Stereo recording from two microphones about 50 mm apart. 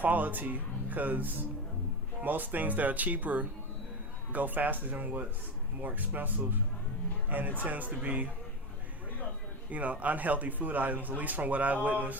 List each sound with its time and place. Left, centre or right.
0.0 s a man's voice: right
9.6 s a man's voice: right